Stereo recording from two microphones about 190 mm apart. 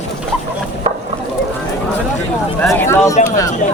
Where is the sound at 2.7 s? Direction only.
15° left (ahead or behind).